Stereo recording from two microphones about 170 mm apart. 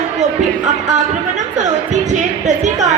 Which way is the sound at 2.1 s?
45° right (ahead or behind).